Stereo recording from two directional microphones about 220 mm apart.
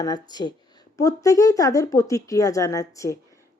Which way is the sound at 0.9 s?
15° left (ahead or behind).